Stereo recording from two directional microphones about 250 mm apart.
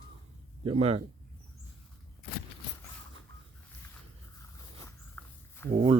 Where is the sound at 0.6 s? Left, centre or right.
Right.